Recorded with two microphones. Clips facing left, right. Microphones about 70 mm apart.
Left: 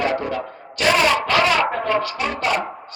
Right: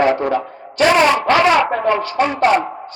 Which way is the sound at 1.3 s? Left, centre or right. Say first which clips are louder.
Right 5 dB; right.